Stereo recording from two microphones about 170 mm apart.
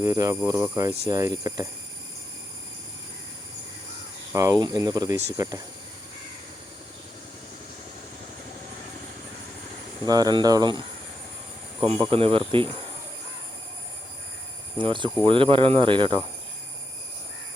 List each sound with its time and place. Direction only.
0.0 s speech: 20° right (ahead or behind)
4.3 s speech: 20° right (ahead or behind)
10.1 s speech: 25° right (ahead or behind)
14.8 s speech: 30° right (ahead or behind)